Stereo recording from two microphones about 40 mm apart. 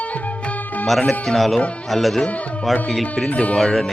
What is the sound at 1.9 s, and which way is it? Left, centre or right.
Speech, centre.